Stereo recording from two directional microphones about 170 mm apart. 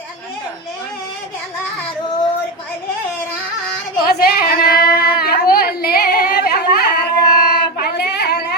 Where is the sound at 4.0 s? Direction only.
65° left (ahead or behind).